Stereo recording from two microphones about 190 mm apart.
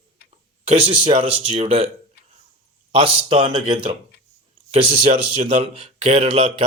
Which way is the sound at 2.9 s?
30° right (ahead or behind).